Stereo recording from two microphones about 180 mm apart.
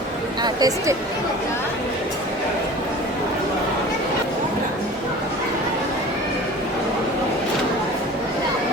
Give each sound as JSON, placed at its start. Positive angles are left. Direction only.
{"t": 0.4, "sound": "speech", "side_deg": -20}